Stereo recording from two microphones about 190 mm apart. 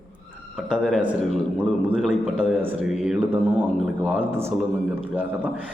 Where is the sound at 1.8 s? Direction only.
5° left (ahead or behind).